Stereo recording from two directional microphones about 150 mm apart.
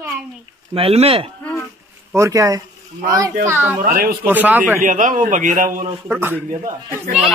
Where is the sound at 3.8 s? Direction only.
80° right.